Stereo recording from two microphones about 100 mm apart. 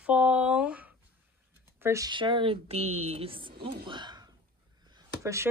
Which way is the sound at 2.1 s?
55° right (ahead or behind).